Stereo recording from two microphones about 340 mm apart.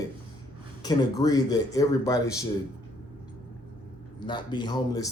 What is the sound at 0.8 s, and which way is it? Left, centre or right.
A man's voice, centre.